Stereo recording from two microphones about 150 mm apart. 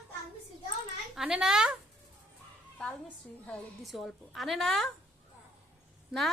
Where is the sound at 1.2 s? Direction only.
5° right (ahead or behind).